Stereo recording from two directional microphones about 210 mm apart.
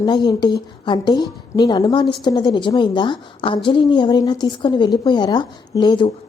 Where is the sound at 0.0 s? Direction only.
20° left (ahead or behind).